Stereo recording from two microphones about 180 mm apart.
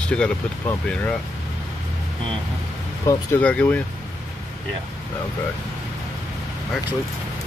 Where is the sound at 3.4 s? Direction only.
5° left (ahead or behind).